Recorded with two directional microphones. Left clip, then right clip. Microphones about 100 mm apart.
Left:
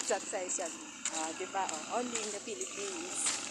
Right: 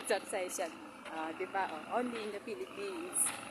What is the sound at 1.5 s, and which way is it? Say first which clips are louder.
Speech: even; 40° right (ahead or behind).